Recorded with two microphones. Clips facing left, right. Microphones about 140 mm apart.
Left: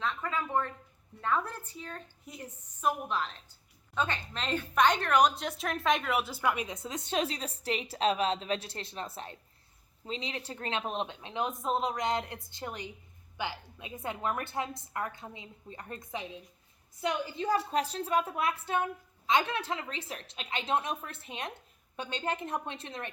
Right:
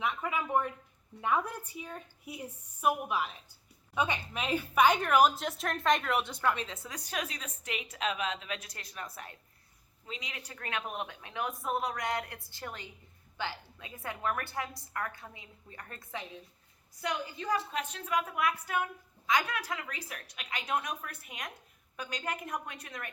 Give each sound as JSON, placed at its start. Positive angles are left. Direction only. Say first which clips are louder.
{"t": 0.0, "sound": "a woman's voice", "louder": "even", "side_deg": -15}